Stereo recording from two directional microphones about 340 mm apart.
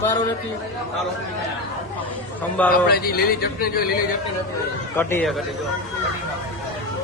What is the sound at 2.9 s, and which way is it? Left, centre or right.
A man's voice, left.